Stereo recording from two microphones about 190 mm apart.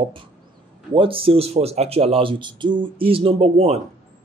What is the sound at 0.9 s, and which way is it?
Speech, 30° right (ahead or behind).